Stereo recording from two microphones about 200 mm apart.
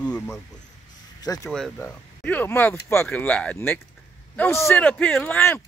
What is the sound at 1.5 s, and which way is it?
Speech, 5° left (ahead or behind).